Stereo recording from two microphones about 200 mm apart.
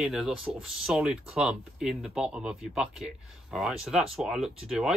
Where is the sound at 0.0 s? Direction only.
Centre (ahead or behind).